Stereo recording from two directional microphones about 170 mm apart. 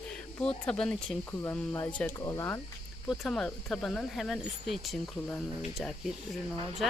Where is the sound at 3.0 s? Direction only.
Centre (ahead or behind).